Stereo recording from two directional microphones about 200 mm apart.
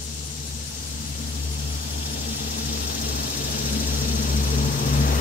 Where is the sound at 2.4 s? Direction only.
50° left (ahead or behind).